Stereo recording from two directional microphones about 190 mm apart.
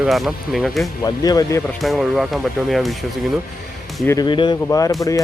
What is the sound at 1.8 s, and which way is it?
Speech, centre (ahead or behind).